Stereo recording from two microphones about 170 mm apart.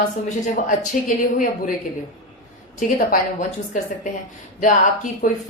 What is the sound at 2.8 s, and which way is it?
Speech, 50° left (ahead or behind).